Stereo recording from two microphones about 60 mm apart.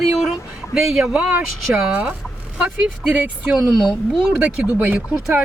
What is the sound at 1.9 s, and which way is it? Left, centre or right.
Speech, right.